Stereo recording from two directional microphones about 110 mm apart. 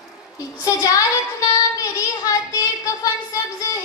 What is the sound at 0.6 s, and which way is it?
Child singing, 30° left (ahead or behind).